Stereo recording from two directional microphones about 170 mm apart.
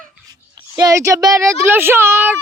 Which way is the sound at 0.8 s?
20° right (ahead or behind).